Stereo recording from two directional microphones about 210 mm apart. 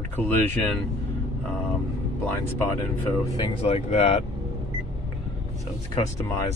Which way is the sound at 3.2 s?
25° left (ahead or behind).